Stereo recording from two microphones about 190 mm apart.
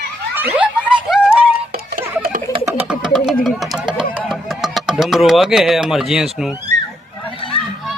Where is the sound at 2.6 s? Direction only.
10° right (ahead or behind).